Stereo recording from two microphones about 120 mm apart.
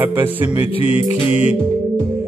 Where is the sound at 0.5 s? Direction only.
50° left (ahead or behind).